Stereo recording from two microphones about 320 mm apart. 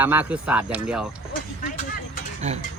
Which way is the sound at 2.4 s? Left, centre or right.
Right.